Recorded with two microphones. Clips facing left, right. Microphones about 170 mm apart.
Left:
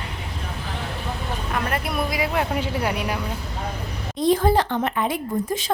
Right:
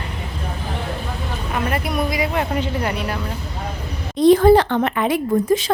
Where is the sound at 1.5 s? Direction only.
5° right (ahead or behind).